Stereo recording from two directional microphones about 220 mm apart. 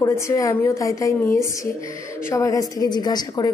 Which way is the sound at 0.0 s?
15° left (ahead or behind).